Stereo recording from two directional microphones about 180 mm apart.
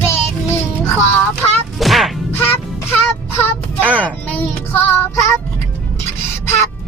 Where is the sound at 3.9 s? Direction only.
10° left (ahead or behind).